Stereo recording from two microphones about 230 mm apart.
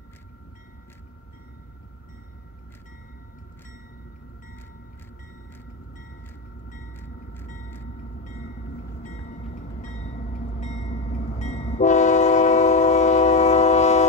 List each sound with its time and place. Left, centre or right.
9.0 s train: left